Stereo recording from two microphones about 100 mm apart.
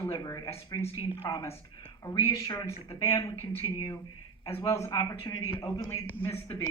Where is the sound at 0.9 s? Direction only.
65° left (ahead or behind).